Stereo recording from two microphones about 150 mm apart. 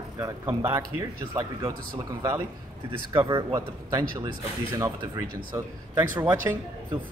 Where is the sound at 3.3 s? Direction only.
25° right (ahead or behind).